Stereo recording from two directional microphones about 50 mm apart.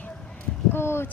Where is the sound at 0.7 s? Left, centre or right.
Left.